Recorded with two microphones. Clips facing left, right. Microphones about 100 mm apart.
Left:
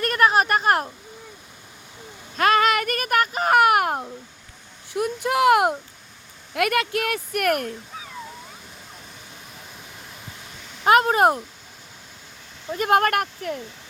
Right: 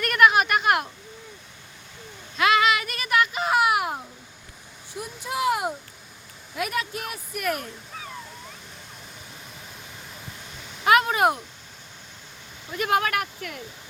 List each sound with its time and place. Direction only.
0.0 s a sound: 35° left (ahead or behind)
2.3 s speech: 45° left (ahead or behind)
4.9 s a woman's voice: 65° left (ahead or behind)
10.8 s speech: 40° left (ahead or behind)
12.7 s speech: 45° left (ahead or behind)